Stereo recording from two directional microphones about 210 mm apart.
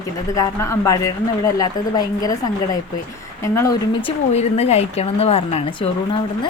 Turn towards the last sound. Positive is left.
turn(degrees=25)  # may be behind; listen again after turning